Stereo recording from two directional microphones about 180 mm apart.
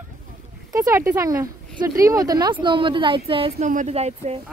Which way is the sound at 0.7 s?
15° right (ahead or behind).